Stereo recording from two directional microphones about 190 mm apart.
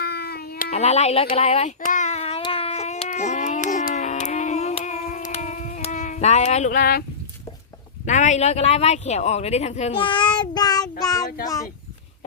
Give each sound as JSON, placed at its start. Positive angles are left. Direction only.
{"t": 0.0, "sound": "cat", "side_deg": 55}
{"t": 0.7, "sound": "speech", "side_deg": 35}
{"t": 1.4, "sound": "child singing", "side_deg": 35}
{"t": 8.0, "sound": "speech", "side_deg": 40}
{"t": 11.0, "sound": "child singing", "side_deg": 20}
{"t": 11.4, "sound": "speech", "side_deg": 20}